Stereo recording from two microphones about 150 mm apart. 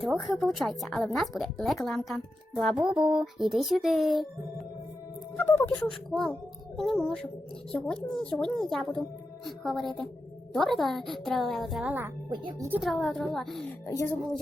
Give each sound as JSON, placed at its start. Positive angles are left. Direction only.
{"t": 0.0, "sound": "a woman's voice", "side_deg": 0}
{"t": 5.4, "sound": "speech", "side_deg": 15}
{"t": 5.8, "sound": "a woman's voice", "side_deg": 5}
{"t": 12.3, "sound": "speech", "side_deg": -30}
{"t": 12.8, "sound": "a woman's voice", "side_deg": 0}
{"t": 13.8, "sound": "speech", "side_deg": 20}